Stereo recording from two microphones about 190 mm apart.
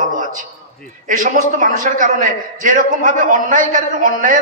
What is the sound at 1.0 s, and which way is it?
A man's voice, 45° right (ahead or behind).